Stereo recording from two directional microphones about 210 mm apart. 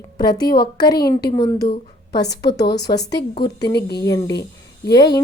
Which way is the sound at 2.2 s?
55° left (ahead or behind).